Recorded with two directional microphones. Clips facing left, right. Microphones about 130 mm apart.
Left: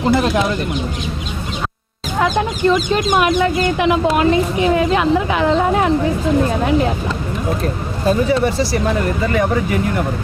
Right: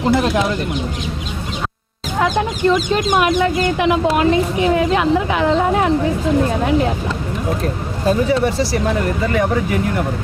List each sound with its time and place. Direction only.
0.1 s speech: 15° left (ahead or behind)
2.1 s speech: 15° left (ahead or behind)
8.0 s speech: 15° left (ahead or behind)